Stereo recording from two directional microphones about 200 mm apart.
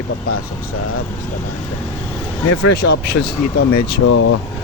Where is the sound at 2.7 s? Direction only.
55° left (ahead or behind).